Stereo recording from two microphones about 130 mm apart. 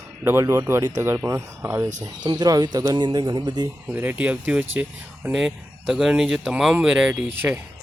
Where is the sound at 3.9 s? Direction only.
15° right (ahead or behind).